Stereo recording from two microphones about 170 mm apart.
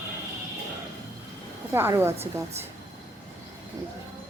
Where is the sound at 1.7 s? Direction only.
15° right (ahead or behind).